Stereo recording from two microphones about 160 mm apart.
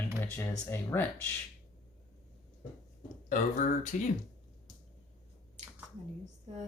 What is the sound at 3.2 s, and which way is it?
Speech, 50° left (ahead or behind).